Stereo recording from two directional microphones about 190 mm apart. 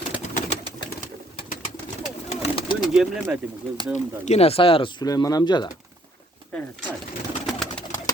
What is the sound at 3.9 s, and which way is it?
Speech, 35° left (ahead or behind).